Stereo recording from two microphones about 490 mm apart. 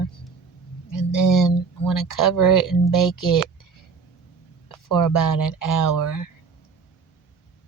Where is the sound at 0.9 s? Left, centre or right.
Left.